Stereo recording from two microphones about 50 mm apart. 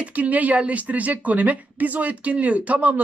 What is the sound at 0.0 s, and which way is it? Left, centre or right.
Speech, right.